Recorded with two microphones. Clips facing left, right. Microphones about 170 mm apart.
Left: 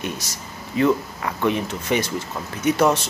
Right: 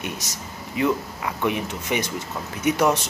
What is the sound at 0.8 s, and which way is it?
Speech, 15° right (ahead or behind).